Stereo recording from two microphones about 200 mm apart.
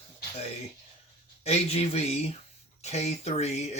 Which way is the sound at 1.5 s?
30° left (ahead or behind).